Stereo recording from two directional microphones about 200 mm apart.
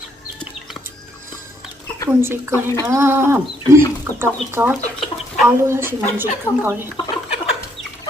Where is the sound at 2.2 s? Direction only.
10° right (ahead or behind).